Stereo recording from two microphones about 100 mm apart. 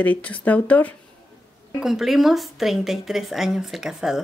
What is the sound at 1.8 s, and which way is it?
A woman's voice, 5° right (ahead or behind).